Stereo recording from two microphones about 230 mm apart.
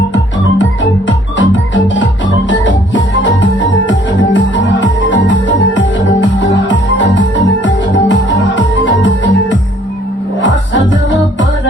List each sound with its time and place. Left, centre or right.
0.6 s music: left